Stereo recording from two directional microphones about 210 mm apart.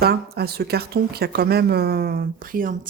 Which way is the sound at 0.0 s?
50° right (ahead or behind).